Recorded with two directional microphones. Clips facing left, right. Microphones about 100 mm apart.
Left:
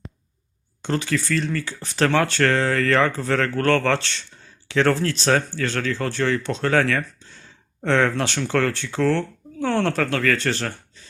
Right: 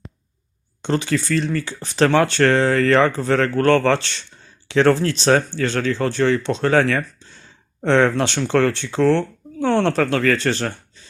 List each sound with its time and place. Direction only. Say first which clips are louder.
0.8 s speech: right 3 dB; 25° right (ahead or behind)